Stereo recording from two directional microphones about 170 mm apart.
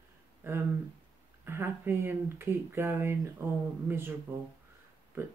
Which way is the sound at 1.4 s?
15° right (ahead or behind).